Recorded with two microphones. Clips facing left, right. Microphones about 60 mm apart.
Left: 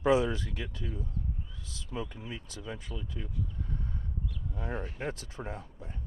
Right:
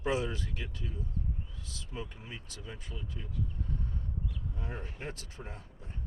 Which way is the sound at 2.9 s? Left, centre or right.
Left.